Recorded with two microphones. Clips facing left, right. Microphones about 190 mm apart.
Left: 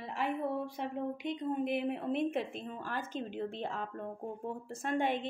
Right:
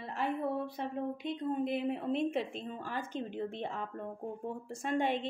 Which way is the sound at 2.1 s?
50° left (ahead or behind).